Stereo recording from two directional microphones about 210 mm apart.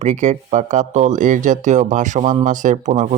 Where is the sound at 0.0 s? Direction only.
35° right (ahead or behind).